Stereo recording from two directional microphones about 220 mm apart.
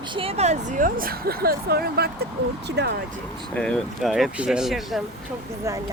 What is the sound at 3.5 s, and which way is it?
Speech, 5° left (ahead or behind).